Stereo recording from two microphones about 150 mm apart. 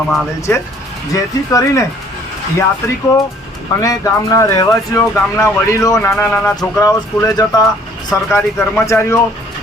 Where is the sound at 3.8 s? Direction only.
20° left (ahead or behind).